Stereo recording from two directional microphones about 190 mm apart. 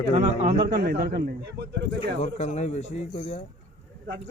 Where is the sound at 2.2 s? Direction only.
35° left (ahead or behind).